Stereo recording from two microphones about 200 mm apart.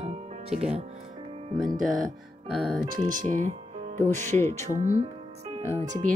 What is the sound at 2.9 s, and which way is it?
Speech, 40° right (ahead or behind).